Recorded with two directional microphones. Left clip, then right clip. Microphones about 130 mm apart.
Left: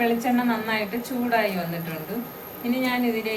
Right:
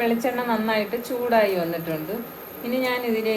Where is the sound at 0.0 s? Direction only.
45° right (ahead or behind).